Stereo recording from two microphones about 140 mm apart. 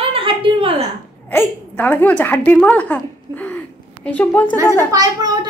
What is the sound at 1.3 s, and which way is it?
A woman's voice, 15° left (ahead or behind).